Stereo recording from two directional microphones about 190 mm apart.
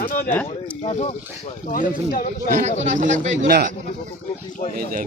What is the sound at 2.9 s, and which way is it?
Speech, 40° right (ahead or behind).